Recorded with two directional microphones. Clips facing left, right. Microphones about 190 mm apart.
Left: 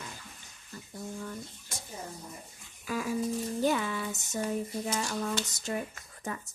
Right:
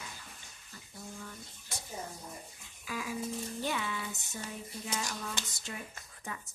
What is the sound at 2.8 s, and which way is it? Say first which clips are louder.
Music: left 6 dB; 45° left (ahead or behind).